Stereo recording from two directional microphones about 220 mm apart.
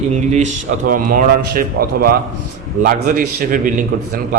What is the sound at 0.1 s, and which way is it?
A man's voice, 30° right (ahead or behind).